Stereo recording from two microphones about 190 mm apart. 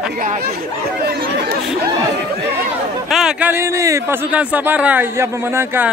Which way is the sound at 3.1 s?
5° right (ahead or behind).